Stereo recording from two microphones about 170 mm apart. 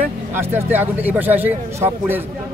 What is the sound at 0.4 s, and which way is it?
Speech, 10° right (ahead or behind).